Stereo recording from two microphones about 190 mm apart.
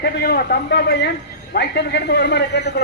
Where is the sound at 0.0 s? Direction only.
55° left (ahead or behind).